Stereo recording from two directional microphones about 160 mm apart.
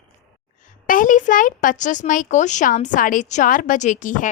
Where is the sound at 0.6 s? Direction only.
55° left (ahead or behind).